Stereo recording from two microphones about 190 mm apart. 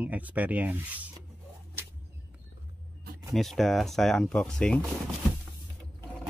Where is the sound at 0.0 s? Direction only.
10° right (ahead or behind).